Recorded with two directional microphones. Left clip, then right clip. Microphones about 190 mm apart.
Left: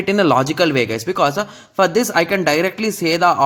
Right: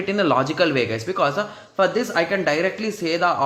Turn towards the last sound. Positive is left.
turn(degrees=35)  # may be behind; listen again after turning